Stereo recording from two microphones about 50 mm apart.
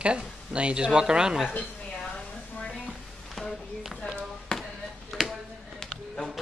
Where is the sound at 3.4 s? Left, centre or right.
Centre.